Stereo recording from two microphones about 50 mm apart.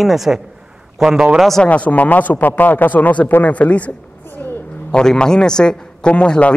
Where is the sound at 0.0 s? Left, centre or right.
Centre.